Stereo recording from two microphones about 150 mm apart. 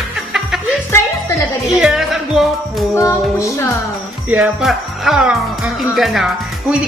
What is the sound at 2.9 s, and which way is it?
Music, 20° left (ahead or behind).